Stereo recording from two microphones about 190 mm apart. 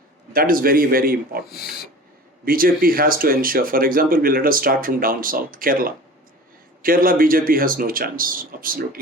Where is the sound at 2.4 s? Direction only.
50° right (ahead or behind).